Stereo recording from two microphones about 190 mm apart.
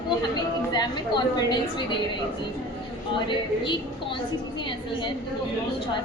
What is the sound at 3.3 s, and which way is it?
Speech, 25° left (ahead or behind).